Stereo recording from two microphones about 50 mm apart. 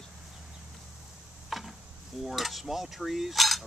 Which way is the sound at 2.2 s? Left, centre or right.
Centre.